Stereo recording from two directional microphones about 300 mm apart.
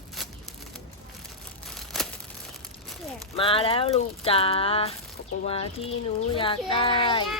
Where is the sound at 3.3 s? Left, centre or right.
Centre.